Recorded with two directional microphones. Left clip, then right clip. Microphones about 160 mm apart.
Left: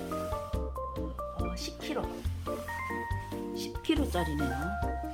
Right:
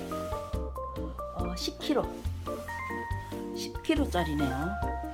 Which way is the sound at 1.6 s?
35° right (ahead or behind).